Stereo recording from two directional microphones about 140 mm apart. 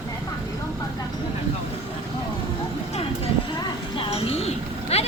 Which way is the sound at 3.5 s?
40° left (ahead or behind).